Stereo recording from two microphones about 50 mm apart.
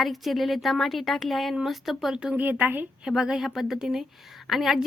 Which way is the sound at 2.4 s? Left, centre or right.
Right.